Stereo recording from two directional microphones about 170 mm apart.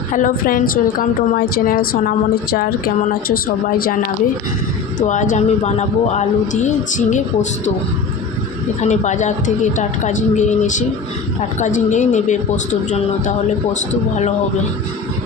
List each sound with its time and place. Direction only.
0.1 s a woman's voice: 50° left (ahead or behind)
4.9 s a man's voice: 45° left (ahead or behind)
8.8 s a man's voice: 45° left (ahead or behind)